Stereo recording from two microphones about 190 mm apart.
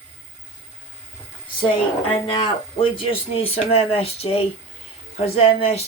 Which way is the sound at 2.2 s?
25° left (ahead or behind).